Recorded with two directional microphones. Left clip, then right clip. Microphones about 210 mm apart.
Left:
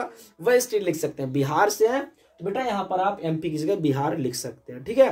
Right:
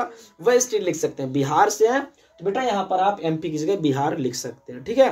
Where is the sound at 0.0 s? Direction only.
10° left (ahead or behind).